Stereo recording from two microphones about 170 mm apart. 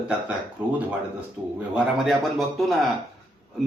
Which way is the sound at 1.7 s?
Centre (ahead or behind).